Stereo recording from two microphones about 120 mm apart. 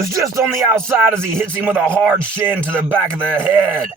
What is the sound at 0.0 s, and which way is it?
Speech, 25° right (ahead or behind).